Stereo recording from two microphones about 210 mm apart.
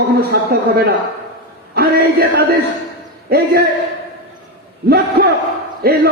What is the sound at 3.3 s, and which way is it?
Speech, 45° right (ahead or behind).